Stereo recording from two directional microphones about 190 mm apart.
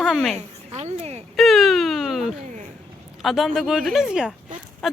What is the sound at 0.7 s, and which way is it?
Speech, 35° right (ahead or behind).